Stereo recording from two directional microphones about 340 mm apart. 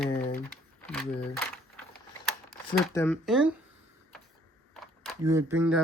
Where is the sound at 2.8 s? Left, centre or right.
Centre.